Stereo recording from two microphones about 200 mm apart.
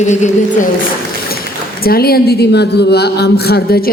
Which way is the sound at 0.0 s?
35° left (ahead or behind).